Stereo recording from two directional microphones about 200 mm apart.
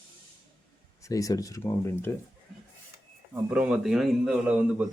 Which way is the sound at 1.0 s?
15° left (ahead or behind).